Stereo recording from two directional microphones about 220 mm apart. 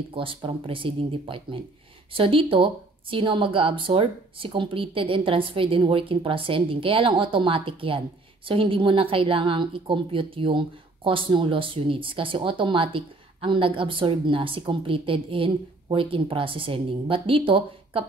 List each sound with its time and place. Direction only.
0.1 s speech: 25° right (ahead or behind)